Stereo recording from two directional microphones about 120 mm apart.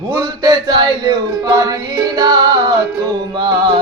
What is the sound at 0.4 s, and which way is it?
Music, 40° right (ahead or behind).